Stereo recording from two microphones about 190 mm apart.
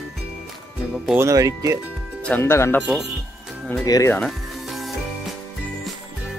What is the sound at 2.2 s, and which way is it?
Speech, 10° left (ahead or behind).